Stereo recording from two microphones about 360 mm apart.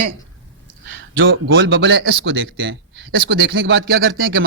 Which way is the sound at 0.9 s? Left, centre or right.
Right.